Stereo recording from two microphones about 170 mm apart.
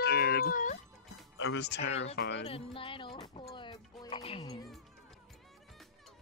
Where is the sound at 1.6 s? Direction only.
85° left.